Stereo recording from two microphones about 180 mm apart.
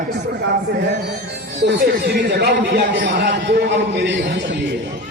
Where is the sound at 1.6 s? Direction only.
70° right (ahead or behind).